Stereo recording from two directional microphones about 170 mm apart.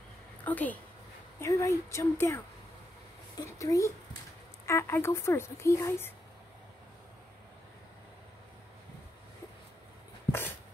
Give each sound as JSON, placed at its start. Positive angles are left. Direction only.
{"t": 0.4, "sound": "a woman's voice", "side_deg": 10}